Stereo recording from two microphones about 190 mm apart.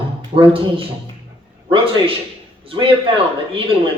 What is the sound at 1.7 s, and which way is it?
A man's voice, 30° right (ahead or behind).